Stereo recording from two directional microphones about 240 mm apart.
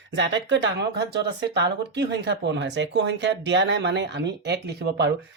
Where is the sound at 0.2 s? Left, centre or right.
Right.